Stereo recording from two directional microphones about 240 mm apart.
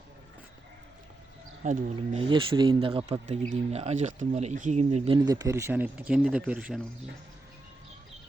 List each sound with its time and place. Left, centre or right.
1.6 s speech: right; by 6.8 s centre